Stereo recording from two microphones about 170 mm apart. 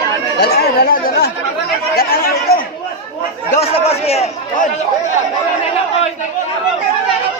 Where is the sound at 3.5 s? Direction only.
35° left (ahead or behind).